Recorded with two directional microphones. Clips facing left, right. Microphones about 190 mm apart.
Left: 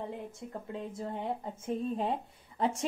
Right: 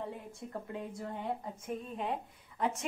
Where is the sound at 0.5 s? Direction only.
25° left (ahead or behind).